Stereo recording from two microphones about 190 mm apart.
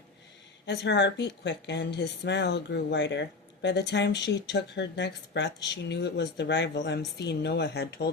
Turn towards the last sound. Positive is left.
turn(degrees=60)  # may be behind; listen again after turning